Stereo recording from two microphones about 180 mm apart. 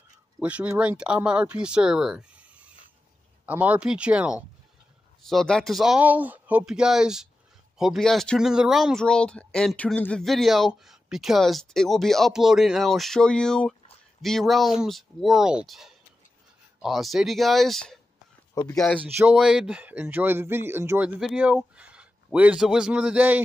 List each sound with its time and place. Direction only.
0.4 s speech: 5° right (ahead or behind)
18.5 s speech: 20° left (ahead or behind)
18.8 s speech: 5° left (ahead or behind)